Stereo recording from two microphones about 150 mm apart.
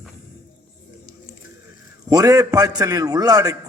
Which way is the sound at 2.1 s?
20° right (ahead or behind).